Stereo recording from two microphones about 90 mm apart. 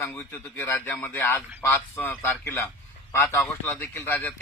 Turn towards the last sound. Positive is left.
turn(degrees=20)  # may be behind; listen again after turning